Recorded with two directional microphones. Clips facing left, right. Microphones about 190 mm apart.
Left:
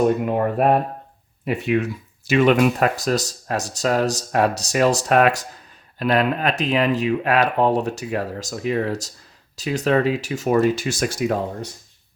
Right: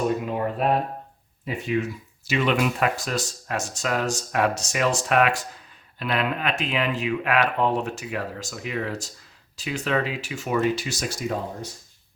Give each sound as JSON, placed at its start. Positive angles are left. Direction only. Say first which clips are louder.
{"t": 0.3, "sound": "speech", "louder": "left 5 dB", "side_deg": 55}
{"t": 1.5, "sound": "speech", "louder": "left 5 dB", "side_deg": 65}
{"t": 2.2, "sound": "speech", "louder": "left 7 dB", "side_deg": 50}